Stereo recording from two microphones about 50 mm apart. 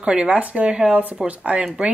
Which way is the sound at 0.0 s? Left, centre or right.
Right.